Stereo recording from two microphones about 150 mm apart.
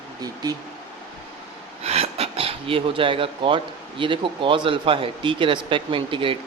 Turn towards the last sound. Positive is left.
turn(degrees=-35)  # may be behind; listen again after turning